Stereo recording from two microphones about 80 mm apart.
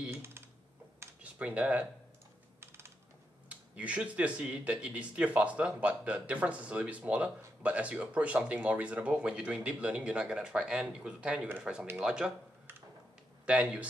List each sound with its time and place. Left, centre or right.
0.1 s typing: right
1.2 s speech: centre
3.4 s speech: centre
13.5 s speech: centre